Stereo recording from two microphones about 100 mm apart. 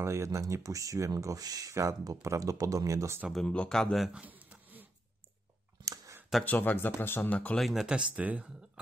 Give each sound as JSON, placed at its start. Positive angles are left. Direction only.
{"t": 0.0, "sound": "speech", "side_deg": -30}
{"t": 3.4, "sound": "speech", "side_deg": 10}
{"t": 4.1, "sound": "a sound", "side_deg": -15}
{"t": 6.4, "sound": "speech", "side_deg": 15}
{"t": 7.5, "sound": "speech", "side_deg": 0}